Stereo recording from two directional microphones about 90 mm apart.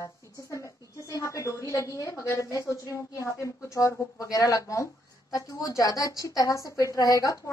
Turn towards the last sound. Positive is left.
turn(degrees=40)  # may be behind; listen again after turning